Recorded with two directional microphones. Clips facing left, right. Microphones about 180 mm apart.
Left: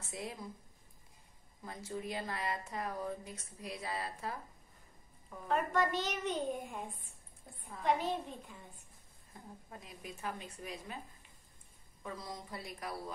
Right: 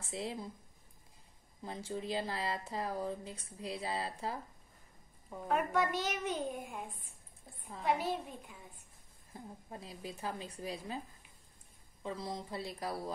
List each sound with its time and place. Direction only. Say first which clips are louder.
0.0 s speech: right 3 dB; 30° right (ahead or behind)
1.6 s speech: right 2 dB; 25° right (ahead or behind)
5.5 s a child's voice: even; 10° right (ahead or behind)
9.3 s speech: right 4 dB; 30° right (ahead or behind)
12.0 s speech: right 4 dB; 25° right (ahead or behind)